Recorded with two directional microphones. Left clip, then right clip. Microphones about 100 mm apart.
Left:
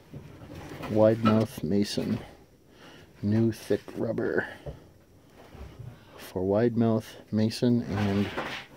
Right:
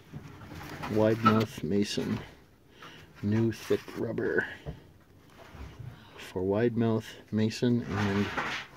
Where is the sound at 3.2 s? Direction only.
20° left (ahead or behind).